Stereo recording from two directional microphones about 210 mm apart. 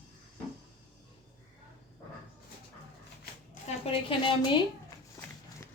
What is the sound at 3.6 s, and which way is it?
Speech, 25° left (ahead or behind).